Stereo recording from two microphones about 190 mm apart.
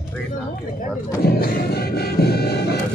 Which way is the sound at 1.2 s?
55° left (ahead or behind).